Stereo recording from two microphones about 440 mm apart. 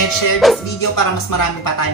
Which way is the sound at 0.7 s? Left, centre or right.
Left.